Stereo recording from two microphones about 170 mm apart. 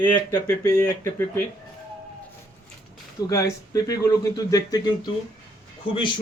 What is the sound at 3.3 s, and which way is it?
Speech, 20° left (ahead or behind).